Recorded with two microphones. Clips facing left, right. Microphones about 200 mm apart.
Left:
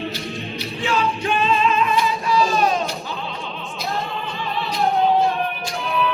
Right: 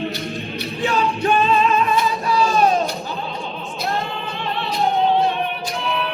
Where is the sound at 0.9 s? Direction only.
40° right (ahead or behind).